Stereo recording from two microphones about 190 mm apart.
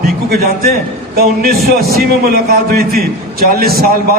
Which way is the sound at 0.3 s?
55° right (ahead or behind).